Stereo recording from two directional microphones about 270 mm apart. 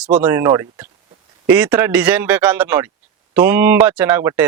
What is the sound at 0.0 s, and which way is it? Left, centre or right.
Speech, centre.